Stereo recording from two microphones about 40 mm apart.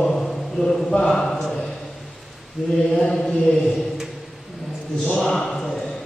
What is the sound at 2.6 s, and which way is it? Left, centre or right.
Mantra, centre.